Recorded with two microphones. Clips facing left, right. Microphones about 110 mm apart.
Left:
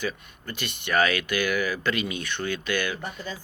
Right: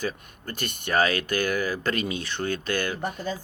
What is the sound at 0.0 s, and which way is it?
Speech, 40° right (ahead or behind).